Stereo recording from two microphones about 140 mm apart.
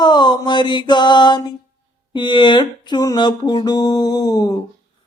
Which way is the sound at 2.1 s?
35° left (ahead or behind).